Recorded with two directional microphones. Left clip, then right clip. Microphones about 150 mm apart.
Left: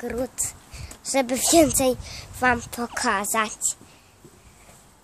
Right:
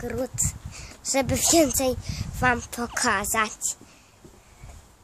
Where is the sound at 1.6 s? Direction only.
15° left (ahead or behind).